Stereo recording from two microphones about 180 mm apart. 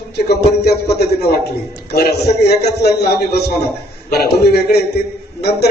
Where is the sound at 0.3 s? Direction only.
65° left (ahead or behind).